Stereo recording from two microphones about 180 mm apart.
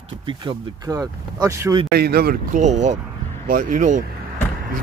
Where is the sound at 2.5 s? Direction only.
40° right (ahead or behind).